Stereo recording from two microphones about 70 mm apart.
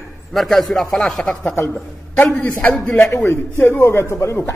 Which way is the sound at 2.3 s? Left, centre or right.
Left.